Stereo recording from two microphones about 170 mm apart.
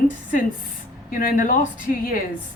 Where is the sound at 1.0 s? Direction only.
55° left (ahead or behind).